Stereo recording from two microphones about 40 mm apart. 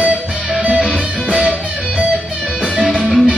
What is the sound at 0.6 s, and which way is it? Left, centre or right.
Music, right.